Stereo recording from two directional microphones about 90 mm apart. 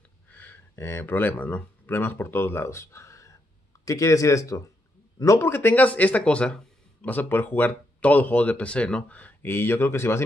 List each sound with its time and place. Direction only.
0.3 s speech: 20° left (ahead or behind)
5.5 s speech: 20° left (ahead or behind)